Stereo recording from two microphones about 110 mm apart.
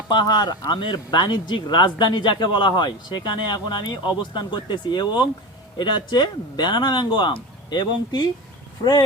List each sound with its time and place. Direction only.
0.1 s speech: 40° left (ahead or behind)